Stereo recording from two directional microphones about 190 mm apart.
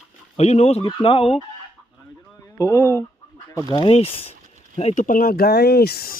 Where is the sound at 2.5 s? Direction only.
15° left (ahead or behind).